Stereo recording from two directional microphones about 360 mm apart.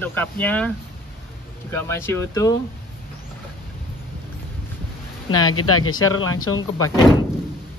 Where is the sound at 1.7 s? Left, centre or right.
Centre.